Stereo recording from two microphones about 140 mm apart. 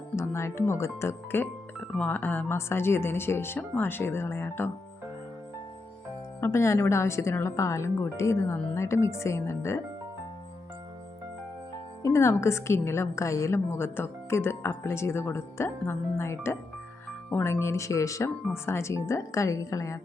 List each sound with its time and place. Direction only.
0.2 s a woman's voice: 20° left (ahead or behind)
6.4 s a woman's voice: 20° left (ahead or behind)
12.0 s a woman's voice: 20° left (ahead or behind)